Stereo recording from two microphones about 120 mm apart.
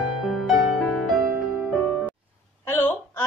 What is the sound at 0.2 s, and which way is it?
Music, centre (ahead or behind).